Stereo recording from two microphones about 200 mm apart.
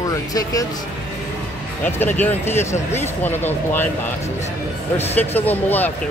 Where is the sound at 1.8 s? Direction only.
10° left (ahead or behind).